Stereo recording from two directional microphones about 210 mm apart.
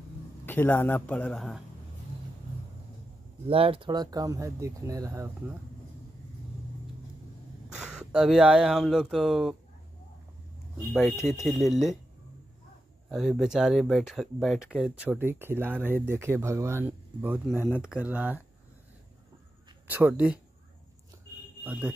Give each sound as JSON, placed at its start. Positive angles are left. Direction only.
{"t": 0.5, "sound": "a man's voice", "side_deg": 10}
{"t": 3.4, "sound": "speech", "side_deg": -25}
{"t": 7.7, "sound": "speech", "side_deg": -5}
{"t": 11.0, "sound": "a man's voice", "side_deg": 10}
{"t": 11.7, "sound": "speech", "side_deg": 0}
{"t": 13.1, "sound": "speech", "side_deg": 0}
{"t": 19.9, "sound": "speech", "side_deg": -10}
{"t": 21.6, "sound": "speech", "side_deg": -5}